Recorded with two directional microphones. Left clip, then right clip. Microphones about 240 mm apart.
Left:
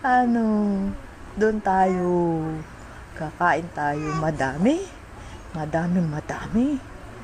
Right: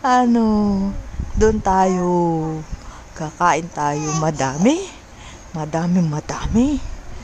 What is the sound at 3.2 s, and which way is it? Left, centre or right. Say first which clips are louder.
Speech: right 4 dB; right.